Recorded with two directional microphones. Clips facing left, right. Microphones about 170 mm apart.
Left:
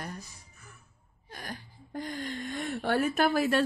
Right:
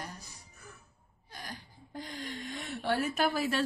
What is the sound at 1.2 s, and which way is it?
A woman's voice, 55° left (ahead or behind).